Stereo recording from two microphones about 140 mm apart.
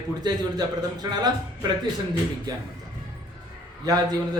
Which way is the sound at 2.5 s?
30° right (ahead or behind).